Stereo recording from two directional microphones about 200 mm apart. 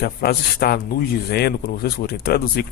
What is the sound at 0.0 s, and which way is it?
A man's voice, 50° left (ahead or behind).